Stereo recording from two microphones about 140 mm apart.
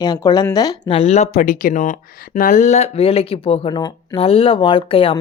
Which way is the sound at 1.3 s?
70° left (ahead or behind).